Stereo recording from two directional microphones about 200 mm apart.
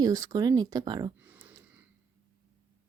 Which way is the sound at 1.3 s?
10° right (ahead or behind).